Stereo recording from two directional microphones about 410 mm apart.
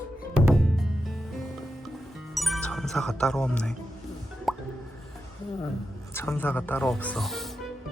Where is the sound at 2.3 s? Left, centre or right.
Centre.